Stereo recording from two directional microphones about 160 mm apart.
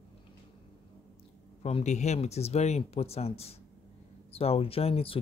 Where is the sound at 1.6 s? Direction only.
45° left (ahead or behind).